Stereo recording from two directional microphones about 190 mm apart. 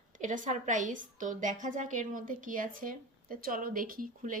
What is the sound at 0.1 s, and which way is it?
A woman's voice, 40° right (ahead or behind).